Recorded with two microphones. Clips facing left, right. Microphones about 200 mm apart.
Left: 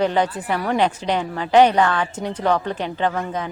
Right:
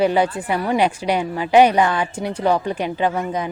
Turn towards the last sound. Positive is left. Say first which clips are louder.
# right 2 dB
turn(degrees=-10)  # may be behind; listen again after turning